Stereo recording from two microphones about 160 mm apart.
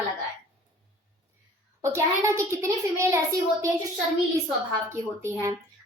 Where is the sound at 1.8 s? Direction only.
20° right (ahead or behind).